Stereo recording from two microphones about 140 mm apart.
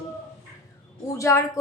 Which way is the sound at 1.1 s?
20° left (ahead or behind).